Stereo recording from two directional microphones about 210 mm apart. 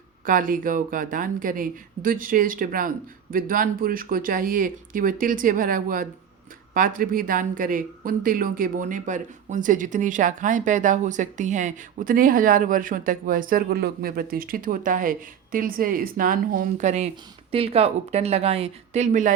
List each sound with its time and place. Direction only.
0.3 s speech: 40° right (ahead or behind)